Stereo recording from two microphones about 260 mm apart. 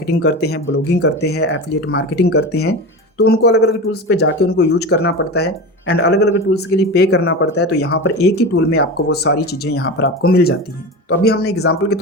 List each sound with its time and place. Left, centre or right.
0.1 s speech: left
11.5 s speech: left